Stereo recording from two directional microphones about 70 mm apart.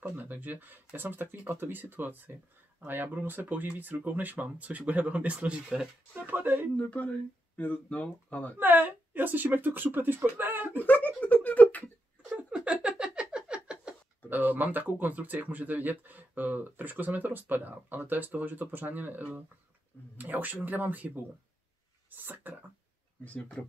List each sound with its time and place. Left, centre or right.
0.0 s speech: right
6.1 s speech: right
6.8 s speech: centre
8.5 s speech: right
10.8 s a sound: left
12.4 s a sound: centre
14.3 s speech: right
23.2 s speech: left